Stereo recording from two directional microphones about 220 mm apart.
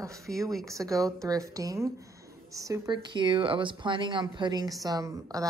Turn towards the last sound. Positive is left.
turn(degrees=-15)  # may be behind; listen again after turning